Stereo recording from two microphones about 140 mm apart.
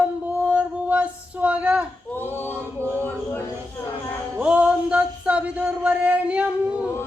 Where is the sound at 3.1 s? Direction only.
15° left (ahead or behind).